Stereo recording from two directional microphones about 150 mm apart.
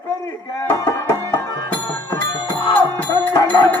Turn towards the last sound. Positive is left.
turn(degrees=25)  # may be behind; listen again after turning